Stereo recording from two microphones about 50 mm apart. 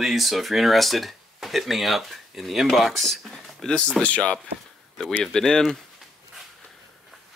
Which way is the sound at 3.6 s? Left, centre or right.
Centre.